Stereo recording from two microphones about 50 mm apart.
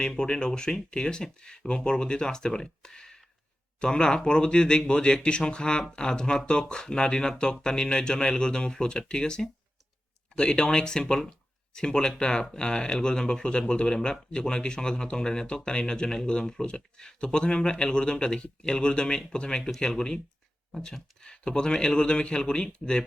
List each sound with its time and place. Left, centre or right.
0.0 s speech: centre